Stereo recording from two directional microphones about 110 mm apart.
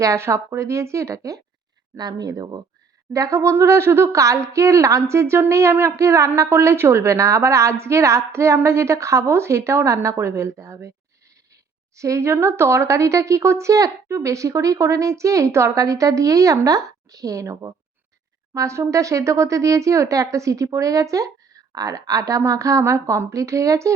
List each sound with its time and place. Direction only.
0.0 s speech: 30° right (ahead or behind)
11.9 s speech: 30° right (ahead or behind)